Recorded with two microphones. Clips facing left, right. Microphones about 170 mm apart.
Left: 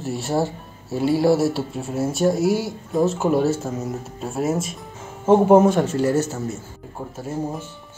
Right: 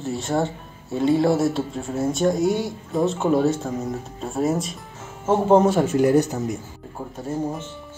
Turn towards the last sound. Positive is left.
turn(degrees=5)  # may be behind; listen again after turning